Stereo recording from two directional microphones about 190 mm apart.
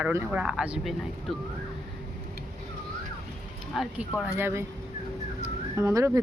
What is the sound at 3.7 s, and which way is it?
Speech, centre (ahead or behind).